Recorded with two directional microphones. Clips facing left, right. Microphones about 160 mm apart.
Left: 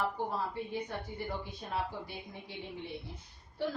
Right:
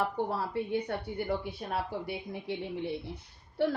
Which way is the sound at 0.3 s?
70° right (ahead or behind).